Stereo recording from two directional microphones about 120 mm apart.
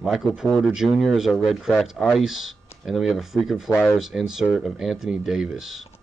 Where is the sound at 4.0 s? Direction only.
Centre (ahead or behind).